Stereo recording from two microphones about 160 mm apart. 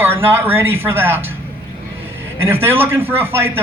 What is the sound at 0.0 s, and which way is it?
A man's voice, 15° right (ahead or behind).